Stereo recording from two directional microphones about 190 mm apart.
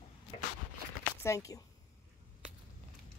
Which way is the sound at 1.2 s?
15° left (ahead or behind).